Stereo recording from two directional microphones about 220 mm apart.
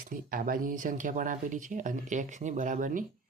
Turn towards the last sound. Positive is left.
turn(degrees=-35)  # may be behind; listen again after turning